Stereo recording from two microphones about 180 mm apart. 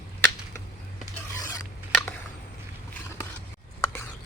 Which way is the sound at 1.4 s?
20° left (ahead or behind).